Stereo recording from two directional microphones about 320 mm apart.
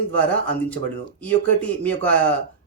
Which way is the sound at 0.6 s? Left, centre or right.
Centre.